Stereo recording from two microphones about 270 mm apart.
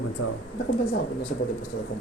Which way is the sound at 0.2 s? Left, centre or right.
Left.